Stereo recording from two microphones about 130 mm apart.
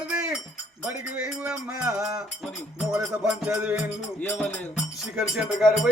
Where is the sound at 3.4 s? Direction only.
10° right (ahead or behind).